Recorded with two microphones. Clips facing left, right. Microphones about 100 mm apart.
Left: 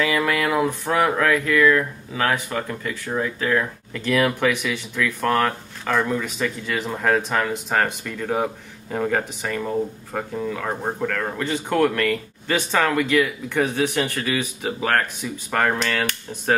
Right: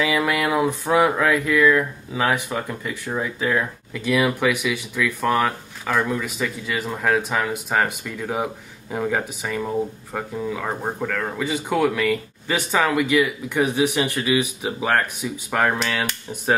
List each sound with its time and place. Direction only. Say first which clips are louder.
0.0 s speech: even; 15° right (ahead or behind)